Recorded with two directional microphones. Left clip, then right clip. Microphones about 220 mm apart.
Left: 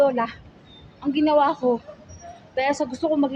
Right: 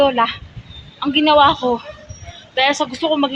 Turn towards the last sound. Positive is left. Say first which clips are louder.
# right 5 dB
turn(degrees=5)  # may be behind; listen again after turning